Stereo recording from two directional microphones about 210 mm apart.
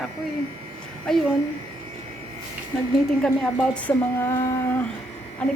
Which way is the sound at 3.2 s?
5° left (ahead or behind).